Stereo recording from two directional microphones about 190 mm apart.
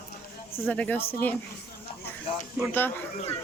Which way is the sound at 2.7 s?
10° left (ahead or behind).